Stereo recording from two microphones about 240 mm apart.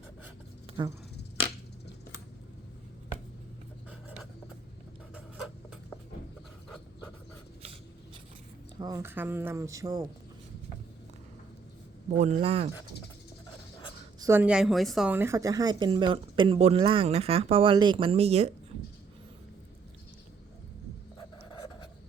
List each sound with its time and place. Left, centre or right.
0.7 s snake: right
8.8 s speech: centre
12.2 s a woman's voice: right
14.2 s a woman's voice: centre